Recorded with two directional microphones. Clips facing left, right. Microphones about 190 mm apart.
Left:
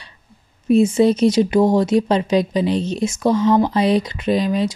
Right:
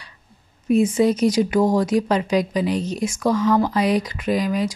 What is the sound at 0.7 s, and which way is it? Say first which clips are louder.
Speech: left 3 dB; 25° left (ahead or behind).